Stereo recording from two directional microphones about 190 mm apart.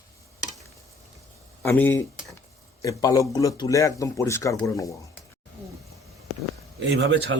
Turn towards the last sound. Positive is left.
turn(degrees=-70)  # may be behind; listen again after turning